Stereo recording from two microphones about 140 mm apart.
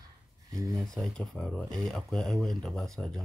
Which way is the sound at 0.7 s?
5° left (ahead or behind).